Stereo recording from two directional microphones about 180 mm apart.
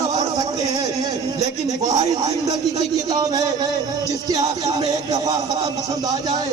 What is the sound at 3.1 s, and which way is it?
A man's voice, 20° right (ahead or behind).